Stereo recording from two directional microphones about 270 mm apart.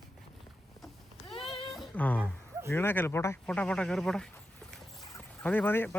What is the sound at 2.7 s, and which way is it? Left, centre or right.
Speech, centre.